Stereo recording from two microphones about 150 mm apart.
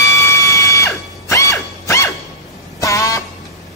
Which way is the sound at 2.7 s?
20° left (ahead or behind).